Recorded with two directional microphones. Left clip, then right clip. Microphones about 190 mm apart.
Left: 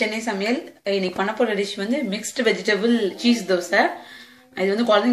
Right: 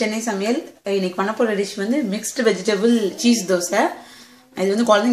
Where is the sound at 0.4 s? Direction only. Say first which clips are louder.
Right 2 dB; 50° right (ahead or behind).